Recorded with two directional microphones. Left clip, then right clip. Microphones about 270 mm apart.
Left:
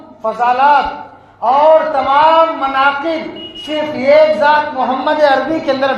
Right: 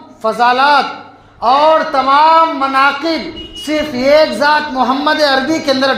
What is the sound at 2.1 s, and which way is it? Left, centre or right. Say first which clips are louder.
Speech: right 1 dB; right.